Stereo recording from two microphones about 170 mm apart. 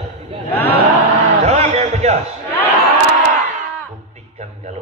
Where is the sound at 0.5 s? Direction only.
10° left (ahead or behind).